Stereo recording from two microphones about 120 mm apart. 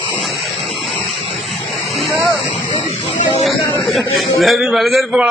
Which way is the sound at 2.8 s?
60° left (ahead or behind).